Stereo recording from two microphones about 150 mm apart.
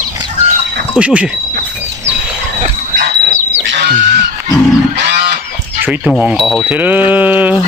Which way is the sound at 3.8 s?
90° right.